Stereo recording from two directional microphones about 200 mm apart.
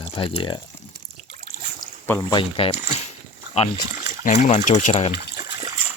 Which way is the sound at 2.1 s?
15° left (ahead or behind).